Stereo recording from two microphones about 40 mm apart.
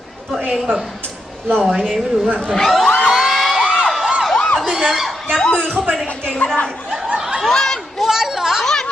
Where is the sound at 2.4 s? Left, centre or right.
Centre.